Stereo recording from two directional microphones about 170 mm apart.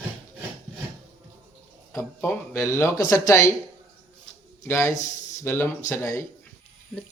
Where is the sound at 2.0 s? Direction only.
15° left (ahead or behind).